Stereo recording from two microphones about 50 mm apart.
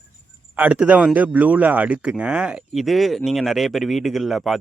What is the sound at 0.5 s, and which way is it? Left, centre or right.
Speech, right.